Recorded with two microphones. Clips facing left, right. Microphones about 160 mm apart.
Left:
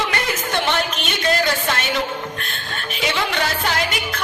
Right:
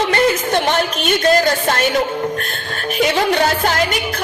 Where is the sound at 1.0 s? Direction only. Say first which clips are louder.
Right 7 dB; 40° right (ahead or behind).